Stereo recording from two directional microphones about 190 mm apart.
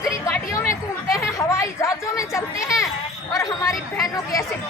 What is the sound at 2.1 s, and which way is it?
Chatter, 15° left (ahead or behind).